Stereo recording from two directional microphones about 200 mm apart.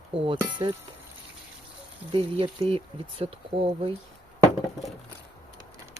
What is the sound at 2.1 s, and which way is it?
Speech, 25° right (ahead or behind).